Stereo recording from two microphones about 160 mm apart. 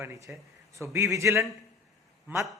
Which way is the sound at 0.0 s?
15° right (ahead or behind).